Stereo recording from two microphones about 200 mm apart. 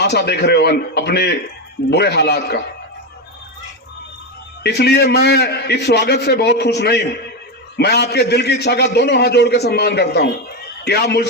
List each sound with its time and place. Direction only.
0.0 s a man's voice: 55° left (ahead or behind)
4.6 s a man's voice: 55° left (ahead or behind)